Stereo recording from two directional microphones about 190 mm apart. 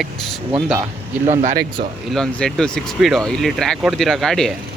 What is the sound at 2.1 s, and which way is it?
Speech, 5° left (ahead or behind).